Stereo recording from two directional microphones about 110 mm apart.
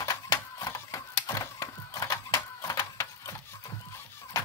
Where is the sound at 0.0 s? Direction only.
35° left (ahead or behind).